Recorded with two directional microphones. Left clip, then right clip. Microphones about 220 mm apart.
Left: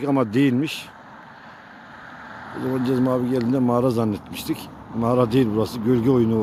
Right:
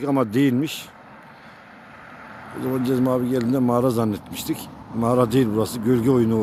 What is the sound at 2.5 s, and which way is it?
Speech, 30° right (ahead or behind).